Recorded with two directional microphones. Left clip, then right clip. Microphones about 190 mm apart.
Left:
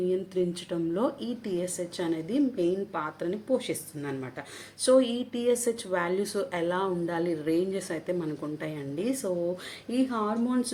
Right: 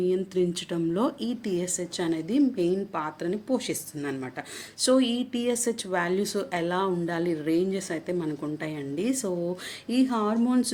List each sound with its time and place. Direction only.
0.1 s a woman's voice: 35° right (ahead or behind)